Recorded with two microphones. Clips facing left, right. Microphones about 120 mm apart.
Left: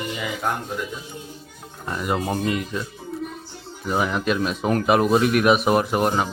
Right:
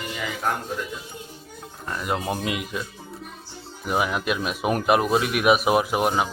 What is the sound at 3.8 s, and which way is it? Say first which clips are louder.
Speech: left 2 dB; 5° right (ahead or behind).